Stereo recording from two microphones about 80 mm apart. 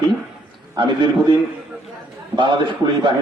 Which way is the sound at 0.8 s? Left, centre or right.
Right.